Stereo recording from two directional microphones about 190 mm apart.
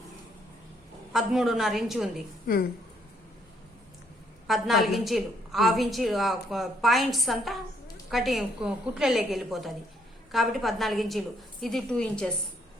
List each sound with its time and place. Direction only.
1.1 s a woman's voice: centre (ahead or behind)
2.5 s a woman's voice: 50° left (ahead or behind)
4.4 s a woman's voice: centre (ahead or behind)